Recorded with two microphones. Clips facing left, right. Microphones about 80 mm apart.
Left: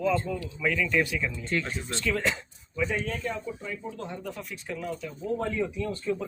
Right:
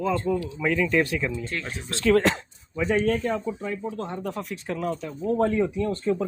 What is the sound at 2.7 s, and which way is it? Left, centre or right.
Speech, right.